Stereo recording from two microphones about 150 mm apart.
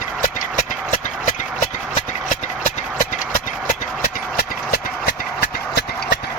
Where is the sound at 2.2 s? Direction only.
60° left (ahead or behind).